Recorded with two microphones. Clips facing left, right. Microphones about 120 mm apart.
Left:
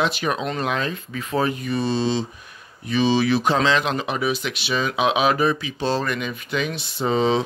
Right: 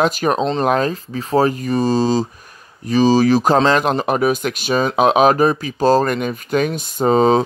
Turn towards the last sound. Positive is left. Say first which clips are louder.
# right 7 dB
turn(degrees=-45)  # may be behind; listen again after turning